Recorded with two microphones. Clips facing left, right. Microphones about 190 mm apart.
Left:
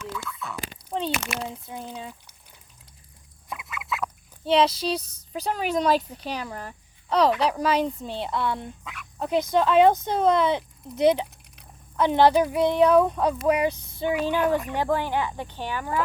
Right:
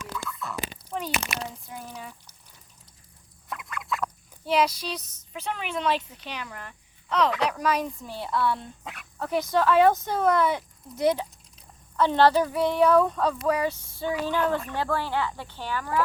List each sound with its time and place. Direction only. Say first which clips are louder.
0.3 s frog: even; centre (ahead or behind)
0.9 s a sound: left 6 dB; 30° left (ahead or behind)
1.7 s speech: left 3 dB; 25° left (ahead or behind)
3.5 s duck: even; 5° left (ahead or behind)
4.4 s a woman's voice: left 4 dB; 25° left (ahead or behind)
8.8 s speech: even; 40° right (ahead or behind)
9.1 s speech: left 2 dB; 20° left (ahead or behind)